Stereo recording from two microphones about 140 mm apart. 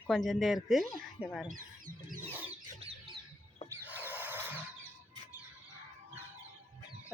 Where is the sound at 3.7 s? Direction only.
15° right (ahead or behind).